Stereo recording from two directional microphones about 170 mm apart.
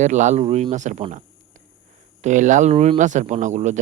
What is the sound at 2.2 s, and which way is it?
Speech, 45° right (ahead or behind).